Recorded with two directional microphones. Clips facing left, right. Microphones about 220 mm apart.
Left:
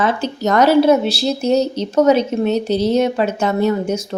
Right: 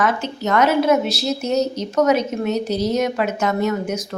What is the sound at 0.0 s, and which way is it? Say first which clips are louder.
A woman's voice: left 3 dB; 30° left (ahead or behind).